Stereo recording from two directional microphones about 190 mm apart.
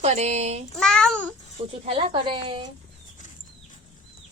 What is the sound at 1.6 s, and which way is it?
Speech, 30° right (ahead or behind).